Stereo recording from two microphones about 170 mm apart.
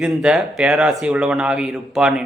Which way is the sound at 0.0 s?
5° right (ahead or behind).